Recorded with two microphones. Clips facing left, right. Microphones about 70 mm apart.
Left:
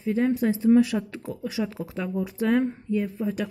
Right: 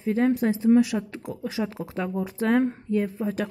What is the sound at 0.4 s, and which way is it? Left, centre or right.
Speech, right.